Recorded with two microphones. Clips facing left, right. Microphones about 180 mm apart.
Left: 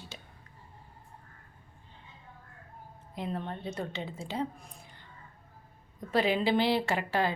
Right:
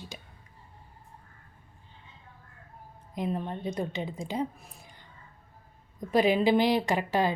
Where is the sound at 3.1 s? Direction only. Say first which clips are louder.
Right 4 dB; 15° right (ahead or behind).